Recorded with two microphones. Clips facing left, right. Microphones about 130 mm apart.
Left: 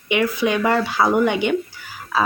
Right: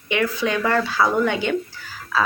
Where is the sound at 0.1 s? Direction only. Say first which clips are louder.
Left 3 dB; 15° left (ahead or behind).